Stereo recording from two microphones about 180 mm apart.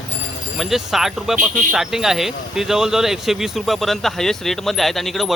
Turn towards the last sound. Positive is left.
turn(degrees=0)  # may be behind; listen again after turning